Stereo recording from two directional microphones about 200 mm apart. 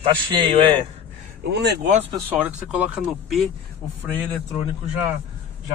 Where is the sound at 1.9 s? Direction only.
30° right (ahead or behind).